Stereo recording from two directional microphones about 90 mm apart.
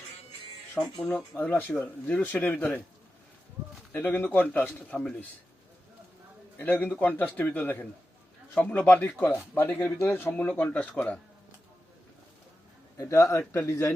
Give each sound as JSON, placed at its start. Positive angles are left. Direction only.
{"t": 0.8, "sound": "speech", "side_deg": 10}
{"t": 1.4, "sound": "speech", "side_deg": 20}
{"t": 3.9, "sound": "speech", "side_deg": 20}
{"t": 6.6, "sound": "speech", "side_deg": 20}
{"t": 13.0, "sound": "a man's voice", "side_deg": 35}